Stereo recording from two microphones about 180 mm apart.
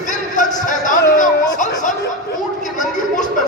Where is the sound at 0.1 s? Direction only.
45° left (ahead or behind).